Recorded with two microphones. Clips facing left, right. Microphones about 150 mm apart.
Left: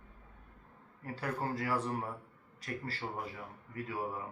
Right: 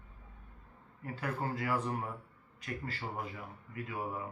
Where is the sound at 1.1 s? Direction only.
35° left (ahead or behind).